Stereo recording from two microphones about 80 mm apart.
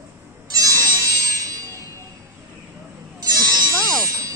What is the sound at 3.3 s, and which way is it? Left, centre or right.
Music, right.